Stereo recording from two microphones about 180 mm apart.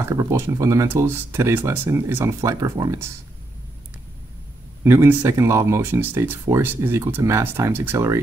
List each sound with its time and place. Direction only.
0.0 s speech: 15° right (ahead or behind)
4.8 s speech: 15° right (ahead or behind)